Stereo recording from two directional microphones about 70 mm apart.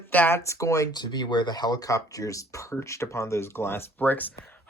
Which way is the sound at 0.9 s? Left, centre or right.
Left.